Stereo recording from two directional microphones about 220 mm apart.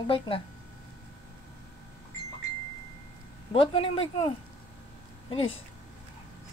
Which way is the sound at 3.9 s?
25° left (ahead or behind).